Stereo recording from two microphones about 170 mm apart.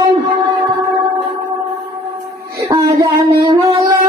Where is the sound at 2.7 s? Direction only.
20° right (ahead or behind).